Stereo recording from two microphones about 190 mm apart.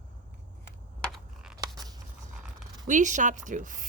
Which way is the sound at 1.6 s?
20° right (ahead or behind).